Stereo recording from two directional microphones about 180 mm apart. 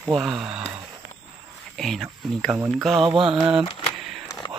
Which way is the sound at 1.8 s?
Centre (ahead or behind).